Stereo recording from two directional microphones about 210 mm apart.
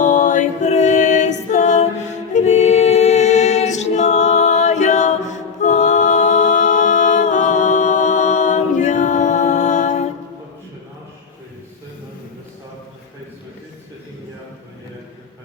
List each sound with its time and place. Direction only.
0.0 s a capella: 35° left (ahead or behind)